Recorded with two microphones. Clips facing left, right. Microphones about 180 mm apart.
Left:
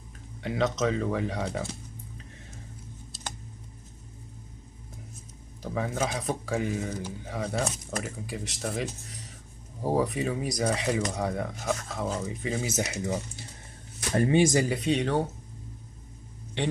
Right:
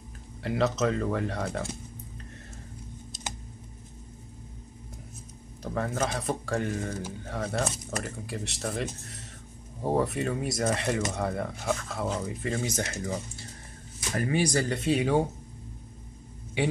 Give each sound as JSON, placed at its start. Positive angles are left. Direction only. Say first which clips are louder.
{"t": 0.4, "sound": "speech", "louder": "right 1 dB", "side_deg": 0}
{"t": 5.6, "sound": "speech", "louder": "even", "side_deg": 0}
{"t": 14.1, "sound": "speech", "louder": "left 4 dB", "side_deg": 25}
{"t": 14.7, "sound": "speech", "louder": "right 1 dB", "side_deg": 0}
{"t": 16.6, "sound": "a man's voice", "louder": "right 2 dB", "side_deg": -10}